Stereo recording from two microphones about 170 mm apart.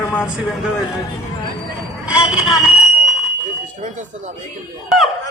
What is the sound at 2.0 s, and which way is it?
Vehicle, 5° right (ahead or behind).